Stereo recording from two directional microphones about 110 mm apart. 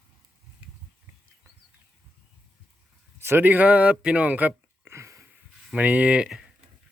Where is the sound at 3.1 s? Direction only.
20° right (ahead or behind).